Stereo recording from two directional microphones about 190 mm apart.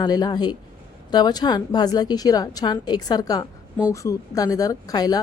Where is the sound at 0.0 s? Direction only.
20° left (ahead or behind).